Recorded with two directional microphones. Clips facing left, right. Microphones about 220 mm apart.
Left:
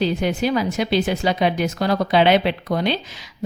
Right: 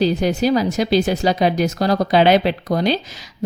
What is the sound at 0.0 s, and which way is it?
A woman's voice, 40° right (ahead or behind).